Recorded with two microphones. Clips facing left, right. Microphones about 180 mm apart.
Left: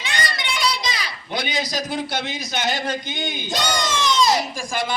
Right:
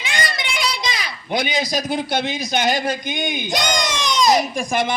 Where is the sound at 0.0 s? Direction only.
10° right (ahead or behind).